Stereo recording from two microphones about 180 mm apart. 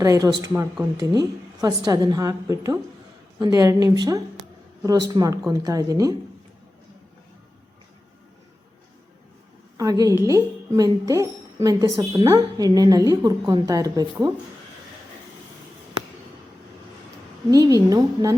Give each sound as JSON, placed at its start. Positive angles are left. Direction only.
{"t": 0.0, "sound": "speech", "side_deg": -20}
{"t": 9.7, "sound": "speech", "side_deg": -20}
{"t": 17.5, "sound": "speech", "side_deg": -20}